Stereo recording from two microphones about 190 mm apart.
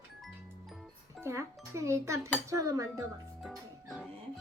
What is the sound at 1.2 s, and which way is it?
Speech, 15° right (ahead or behind).